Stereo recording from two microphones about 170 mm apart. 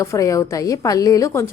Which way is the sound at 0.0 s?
20° left (ahead or behind).